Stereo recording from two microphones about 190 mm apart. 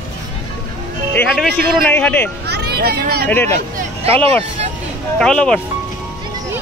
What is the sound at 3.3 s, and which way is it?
Speech, 10° left (ahead or behind).